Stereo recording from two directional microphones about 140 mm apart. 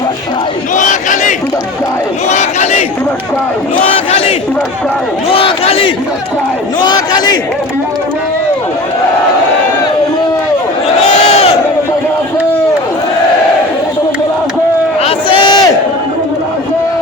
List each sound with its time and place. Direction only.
0.8 s battle cry: 65° left (ahead or behind)
2.3 s battle cry: 55° left (ahead or behind)
5.3 s crowd: 45° left (ahead or behind)
6.8 s a sound: 30° left (ahead or behind)
11.2 s crowd: 50° left (ahead or behind)
15.0 s a sound: 35° left (ahead or behind)